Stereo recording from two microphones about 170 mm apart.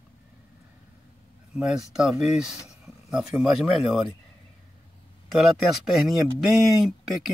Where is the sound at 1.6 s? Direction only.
5° right (ahead or behind).